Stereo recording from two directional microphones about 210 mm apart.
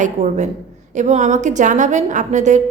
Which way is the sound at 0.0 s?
35° right (ahead or behind).